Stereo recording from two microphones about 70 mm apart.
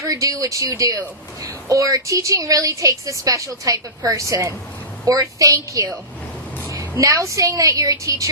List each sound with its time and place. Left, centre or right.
0.0 s a woman's voice: right
7.0 s a woman's voice: right